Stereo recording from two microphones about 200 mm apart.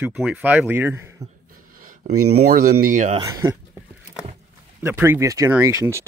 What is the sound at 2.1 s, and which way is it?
Speech, 90° right.